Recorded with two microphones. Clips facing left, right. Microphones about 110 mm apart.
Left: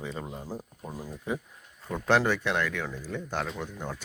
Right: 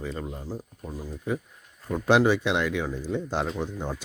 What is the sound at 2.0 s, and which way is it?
Speech, 15° right (ahead or behind).